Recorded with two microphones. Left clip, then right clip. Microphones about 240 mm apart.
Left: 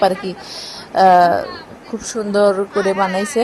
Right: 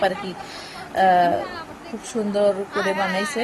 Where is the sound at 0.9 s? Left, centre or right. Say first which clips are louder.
Left 7 dB; left.